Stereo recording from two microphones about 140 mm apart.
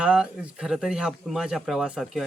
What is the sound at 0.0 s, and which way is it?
Speech, 5° right (ahead or behind).